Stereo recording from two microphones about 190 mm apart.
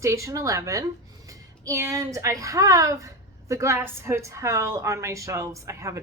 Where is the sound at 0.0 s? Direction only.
15° right (ahead or behind).